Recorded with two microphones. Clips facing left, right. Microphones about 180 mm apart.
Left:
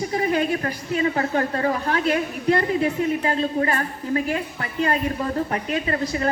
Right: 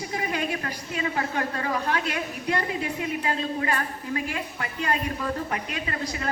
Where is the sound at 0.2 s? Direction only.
35° left (ahead or behind).